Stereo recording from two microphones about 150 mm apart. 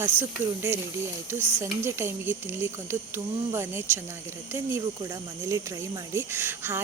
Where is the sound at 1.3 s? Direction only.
15° right (ahead or behind).